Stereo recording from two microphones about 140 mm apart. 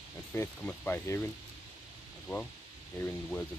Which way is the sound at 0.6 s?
10° left (ahead or behind).